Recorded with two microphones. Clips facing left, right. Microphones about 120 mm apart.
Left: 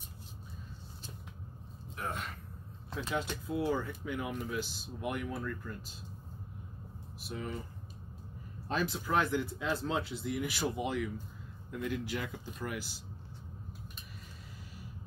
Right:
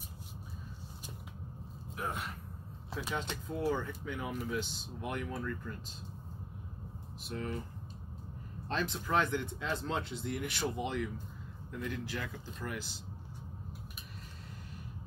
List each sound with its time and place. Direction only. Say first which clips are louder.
2.9 s speech: left 2 dB; 10° right (ahead or behind)
3.2 s speech: left 5 dB; 5° left (ahead or behind)
7.2 s speech: right 1 dB; 5° left (ahead or behind)
8.6 s speech: left 2 dB; 5° left (ahead or behind)